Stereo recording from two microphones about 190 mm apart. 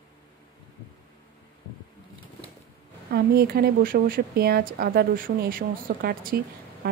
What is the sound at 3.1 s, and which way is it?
A woman's voice, 55° right (ahead or behind).